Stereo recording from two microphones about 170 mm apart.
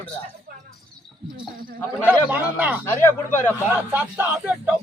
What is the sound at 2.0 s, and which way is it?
Speech, 10° right (ahead or behind).